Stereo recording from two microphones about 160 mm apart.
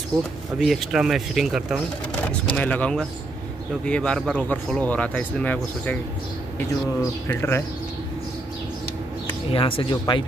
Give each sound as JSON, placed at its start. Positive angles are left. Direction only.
{"t": 0.6, "sound": "speech", "side_deg": 0}
{"t": 2.5, "sound": "speech", "side_deg": 10}
{"t": 7.0, "sound": "speech", "side_deg": 15}
{"t": 9.5, "sound": "speech", "side_deg": 35}